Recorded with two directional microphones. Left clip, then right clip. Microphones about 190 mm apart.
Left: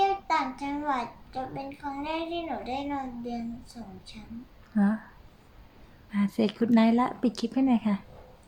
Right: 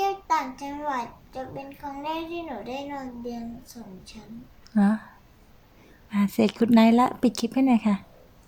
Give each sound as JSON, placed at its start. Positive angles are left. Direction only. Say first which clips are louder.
{"t": 0.0, "sound": "a child's voice", "louder": "right 1 dB", "side_deg": -5}
{"t": 4.7, "sound": "a sound", "louder": "right 4 dB", "side_deg": -20}
{"t": 6.1, "sound": "speech", "louder": "right 4 dB", "side_deg": -20}